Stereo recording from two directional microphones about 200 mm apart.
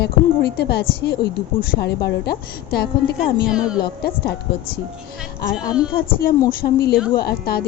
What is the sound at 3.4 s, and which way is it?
Speech, 5° right (ahead or behind).